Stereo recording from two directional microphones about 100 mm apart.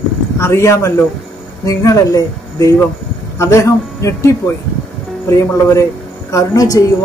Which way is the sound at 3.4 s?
30° left (ahead or behind).